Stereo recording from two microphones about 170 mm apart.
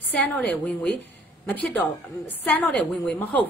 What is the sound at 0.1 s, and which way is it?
A woman's voice, 10° left (ahead or behind).